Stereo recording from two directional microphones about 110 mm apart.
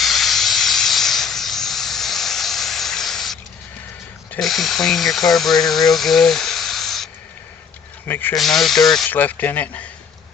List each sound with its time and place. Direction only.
0.0 s hiss: centre (ahead or behind)
4.4 s speech: centre (ahead or behind)
8.0 s speech: 20° left (ahead or behind)
8.4 s speech: centre (ahead or behind)
9.0 s speech: 15° left (ahead or behind)